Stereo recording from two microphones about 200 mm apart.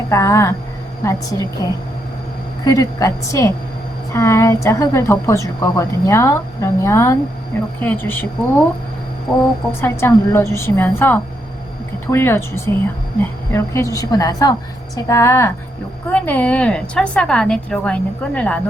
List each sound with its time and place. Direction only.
0.1 s a woman's voice: 15° left (ahead or behind)
2.6 s a woman's voice: 15° left (ahead or behind)
9.8 s a woman's voice: 15° left (ahead or behind)